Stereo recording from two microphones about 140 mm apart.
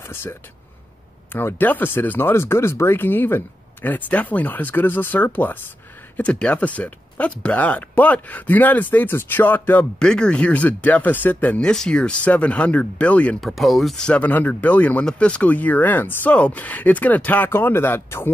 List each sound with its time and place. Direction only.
0.0 s speech: 15° left (ahead or behind)